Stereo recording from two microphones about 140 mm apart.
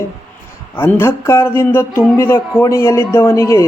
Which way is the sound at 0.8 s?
15° left (ahead or behind).